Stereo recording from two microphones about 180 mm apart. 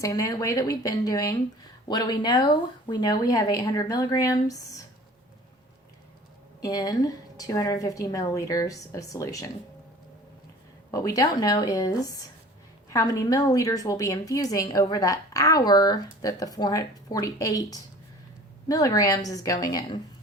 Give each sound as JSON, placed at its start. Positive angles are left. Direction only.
{"t": 0.0, "sound": "a woman's voice", "side_deg": 20}
{"t": 6.6, "sound": "a woman's voice", "side_deg": 20}
{"t": 10.9, "sound": "a woman's voice", "side_deg": 20}